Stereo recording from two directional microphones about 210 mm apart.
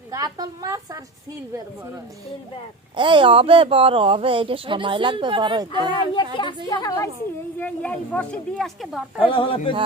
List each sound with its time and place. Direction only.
0.1 s a woman's voice: 20° right (ahead or behind)
2.9 s speech: 25° right (ahead or behind)
6.3 s a woman's voice: 25° left (ahead or behind); by 9.0 s centre (ahead or behind)
9.2 s speech: 25° left (ahead or behind)